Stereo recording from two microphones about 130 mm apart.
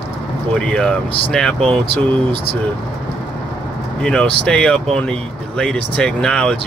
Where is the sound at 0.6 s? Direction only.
5° left (ahead or behind).